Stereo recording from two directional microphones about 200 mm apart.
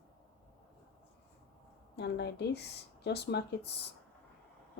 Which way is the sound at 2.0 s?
55° left (ahead or behind).